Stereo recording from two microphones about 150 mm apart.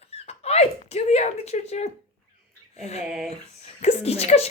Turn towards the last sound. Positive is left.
turn(degrees=45)  # may be behind; listen again after turning